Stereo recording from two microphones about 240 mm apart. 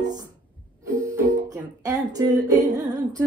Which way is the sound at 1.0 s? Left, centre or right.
Centre.